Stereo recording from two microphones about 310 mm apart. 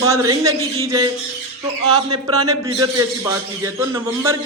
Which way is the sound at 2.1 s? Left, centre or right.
Centre.